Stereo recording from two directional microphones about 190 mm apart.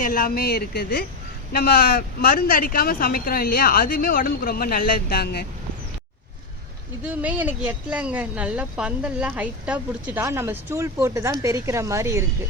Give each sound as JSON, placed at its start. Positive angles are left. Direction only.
{"t": 0.0, "sound": "speech", "side_deg": 50}
{"t": 7.0, "sound": "speech", "side_deg": -5}